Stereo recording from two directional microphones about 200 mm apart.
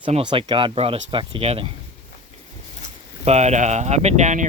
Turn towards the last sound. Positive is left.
turn(degrees=-35)  # may be behind; listen again after turning